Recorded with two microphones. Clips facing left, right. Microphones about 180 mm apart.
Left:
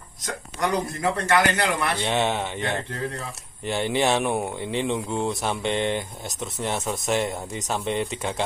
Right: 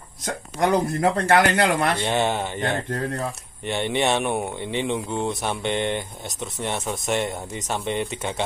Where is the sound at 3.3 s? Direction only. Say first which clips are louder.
Even; centre (ahead or behind).